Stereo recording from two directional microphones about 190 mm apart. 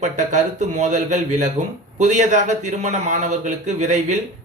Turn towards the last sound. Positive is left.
turn(degrees=-40)  # may be behind; listen again after turning